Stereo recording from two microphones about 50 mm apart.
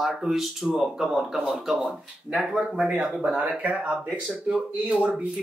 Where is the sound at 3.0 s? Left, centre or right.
Centre.